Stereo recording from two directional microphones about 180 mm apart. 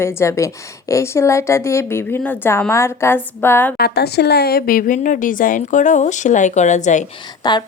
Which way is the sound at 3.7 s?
60° left (ahead or behind).